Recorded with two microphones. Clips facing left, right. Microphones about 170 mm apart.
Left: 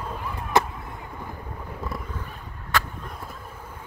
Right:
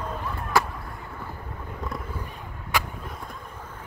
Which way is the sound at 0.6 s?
20° left (ahead or behind).